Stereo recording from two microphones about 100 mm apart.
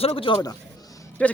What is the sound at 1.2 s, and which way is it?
Speech, 15° left (ahead or behind).